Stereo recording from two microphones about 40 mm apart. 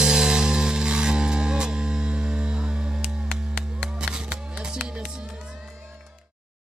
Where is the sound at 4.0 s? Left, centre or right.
Centre.